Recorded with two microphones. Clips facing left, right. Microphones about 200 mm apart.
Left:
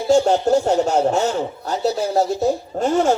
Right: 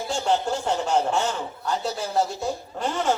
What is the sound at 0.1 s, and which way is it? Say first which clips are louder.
Speech: left 10 dB; 40° left (ahead or behind).